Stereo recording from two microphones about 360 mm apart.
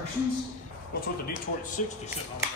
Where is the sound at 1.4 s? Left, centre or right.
Left.